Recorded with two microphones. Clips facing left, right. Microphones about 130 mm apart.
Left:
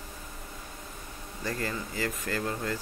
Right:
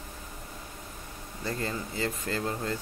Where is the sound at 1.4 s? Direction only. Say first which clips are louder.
Even; 25° right (ahead or behind).